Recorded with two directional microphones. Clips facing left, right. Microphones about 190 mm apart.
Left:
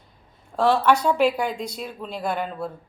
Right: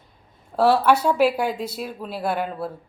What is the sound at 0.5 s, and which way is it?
A woman's voice, 10° right (ahead or behind).